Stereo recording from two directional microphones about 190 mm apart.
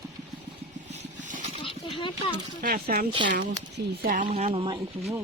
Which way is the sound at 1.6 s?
25° left (ahead or behind).